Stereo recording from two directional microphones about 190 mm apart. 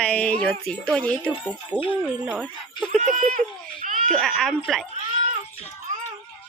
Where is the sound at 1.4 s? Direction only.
5° right (ahead or behind).